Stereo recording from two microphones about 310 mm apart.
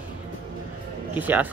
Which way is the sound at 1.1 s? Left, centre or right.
Centre.